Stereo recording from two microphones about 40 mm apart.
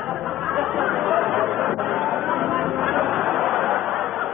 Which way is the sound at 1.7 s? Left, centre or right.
Centre.